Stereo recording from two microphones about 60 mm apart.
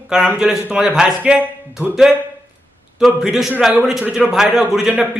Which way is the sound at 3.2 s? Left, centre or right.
Centre.